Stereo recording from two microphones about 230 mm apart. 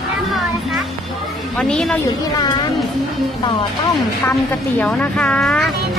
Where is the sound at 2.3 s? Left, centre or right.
Centre.